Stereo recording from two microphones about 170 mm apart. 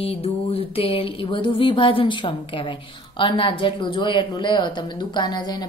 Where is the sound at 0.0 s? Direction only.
35° left (ahead or behind).